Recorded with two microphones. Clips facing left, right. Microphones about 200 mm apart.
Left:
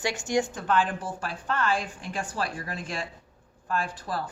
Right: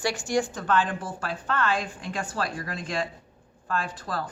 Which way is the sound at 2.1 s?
10° left (ahead or behind).